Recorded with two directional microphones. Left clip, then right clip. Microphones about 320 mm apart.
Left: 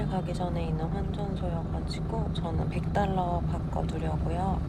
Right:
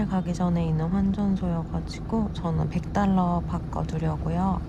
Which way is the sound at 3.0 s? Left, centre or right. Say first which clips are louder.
Right 3 dB; right.